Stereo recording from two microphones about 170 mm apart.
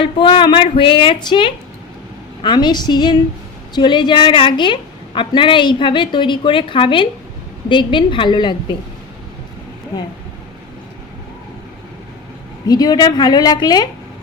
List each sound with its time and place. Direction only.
0.0 s a woman's voice: 30° left (ahead or behind)
12.6 s a woman's voice: 25° left (ahead or behind)